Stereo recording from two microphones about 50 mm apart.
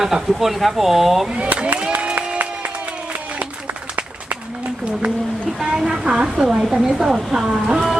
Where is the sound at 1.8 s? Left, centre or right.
Right.